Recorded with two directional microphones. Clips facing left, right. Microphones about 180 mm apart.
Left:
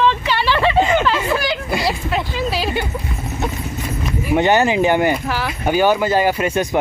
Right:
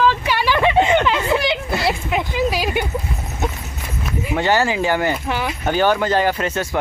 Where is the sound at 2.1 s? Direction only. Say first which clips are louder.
Right 1 dB; 15° right (ahead or behind).